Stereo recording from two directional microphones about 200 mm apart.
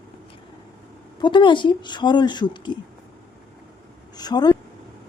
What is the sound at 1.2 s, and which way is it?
Speech, 25° left (ahead or behind).